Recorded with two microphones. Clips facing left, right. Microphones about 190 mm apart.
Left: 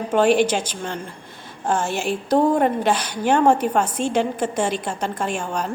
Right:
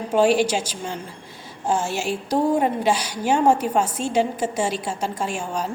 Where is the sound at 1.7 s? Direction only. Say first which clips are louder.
Left 1 dB; 55° left (ahead or behind).